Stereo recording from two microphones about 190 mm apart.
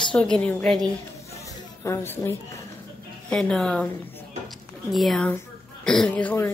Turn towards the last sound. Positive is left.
turn(degrees=10)  # may be behind; listen again after turning